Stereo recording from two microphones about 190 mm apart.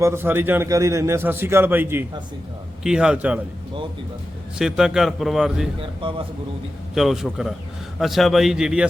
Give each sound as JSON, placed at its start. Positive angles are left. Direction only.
{"t": 0.0, "sound": "a man's voice", "side_deg": -10}
{"t": 4.5, "sound": "a man's voice", "side_deg": -5}
{"t": 6.0, "sound": "a man's voice", "side_deg": -25}
{"t": 6.9, "sound": "a man's voice", "side_deg": 0}